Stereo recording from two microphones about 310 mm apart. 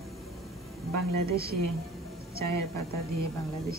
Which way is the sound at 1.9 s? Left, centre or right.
Centre.